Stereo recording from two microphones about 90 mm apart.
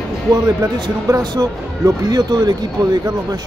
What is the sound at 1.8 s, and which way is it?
Speech, 40° right (ahead or behind).